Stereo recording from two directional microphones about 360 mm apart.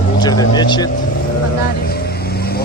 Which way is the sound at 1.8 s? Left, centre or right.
Left.